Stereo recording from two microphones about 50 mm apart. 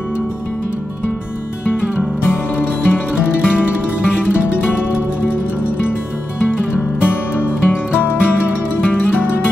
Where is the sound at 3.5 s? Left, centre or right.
Centre.